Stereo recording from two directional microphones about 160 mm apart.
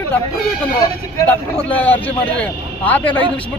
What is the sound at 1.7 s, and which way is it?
A man's voice, 10° left (ahead or behind).